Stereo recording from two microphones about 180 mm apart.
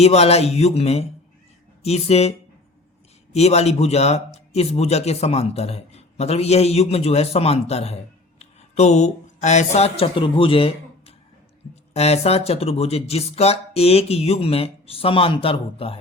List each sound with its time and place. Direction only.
0.0 s speech: 35° left (ahead or behind)
3.3 s speech: 35° left (ahead or behind)